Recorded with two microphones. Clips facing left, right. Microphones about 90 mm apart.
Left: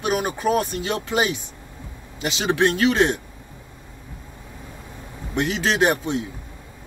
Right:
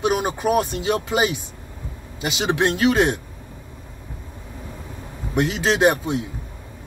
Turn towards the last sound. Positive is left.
turn(degrees=-15)  # may be behind; listen again after turning